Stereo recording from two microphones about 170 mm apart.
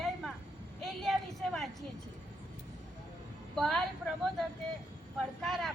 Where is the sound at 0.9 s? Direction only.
Centre (ahead or behind).